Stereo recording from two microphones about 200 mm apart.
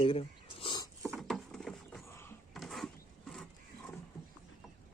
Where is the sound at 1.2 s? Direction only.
Centre (ahead or behind).